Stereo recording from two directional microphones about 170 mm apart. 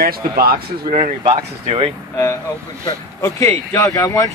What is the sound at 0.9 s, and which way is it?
Speech, 35° right (ahead or behind).